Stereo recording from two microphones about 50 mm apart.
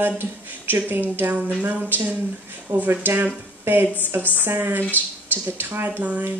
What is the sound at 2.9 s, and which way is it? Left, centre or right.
A woman's voice, right.